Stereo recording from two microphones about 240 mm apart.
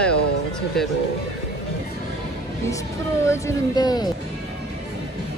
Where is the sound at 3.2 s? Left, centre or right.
Centre.